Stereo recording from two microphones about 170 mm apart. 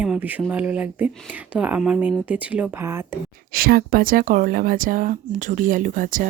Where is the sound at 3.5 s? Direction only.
60° right (ahead or behind).